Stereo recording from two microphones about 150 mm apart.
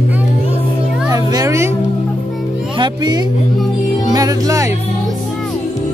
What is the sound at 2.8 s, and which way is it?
Speech, 25° right (ahead or behind).